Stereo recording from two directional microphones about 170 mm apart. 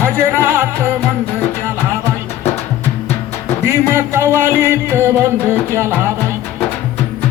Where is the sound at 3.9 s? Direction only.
15° right (ahead or behind).